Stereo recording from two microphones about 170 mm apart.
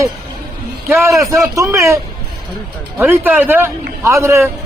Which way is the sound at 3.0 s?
10° right (ahead or behind).